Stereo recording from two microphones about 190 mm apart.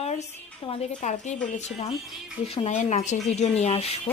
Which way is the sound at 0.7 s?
40° left (ahead or behind).